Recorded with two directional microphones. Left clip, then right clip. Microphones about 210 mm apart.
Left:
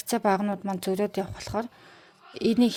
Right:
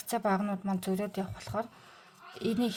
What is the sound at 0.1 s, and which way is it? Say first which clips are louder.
Speech: left 6 dB; 30° left (ahead or behind).